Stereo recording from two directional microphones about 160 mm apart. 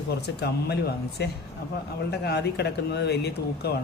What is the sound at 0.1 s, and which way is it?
Speech, 90° left.